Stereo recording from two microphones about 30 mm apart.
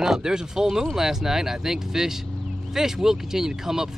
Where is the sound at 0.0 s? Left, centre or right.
Centre.